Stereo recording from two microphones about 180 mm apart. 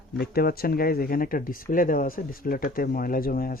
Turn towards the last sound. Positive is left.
turn(degrees=55)  # may be behind; listen again after turning